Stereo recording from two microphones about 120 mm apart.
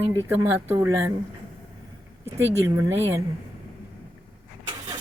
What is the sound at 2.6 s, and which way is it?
Speech, 25° right (ahead or behind).